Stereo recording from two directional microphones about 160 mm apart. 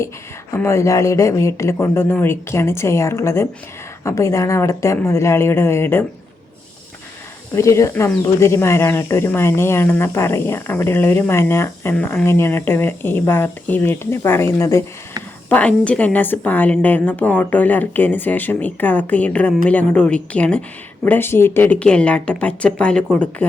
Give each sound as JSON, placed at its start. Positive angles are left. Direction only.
{"t": 0.5, "sound": "speech", "side_deg": 15}
{"t": 7.5, "sound": "speech", "side_deg": 20}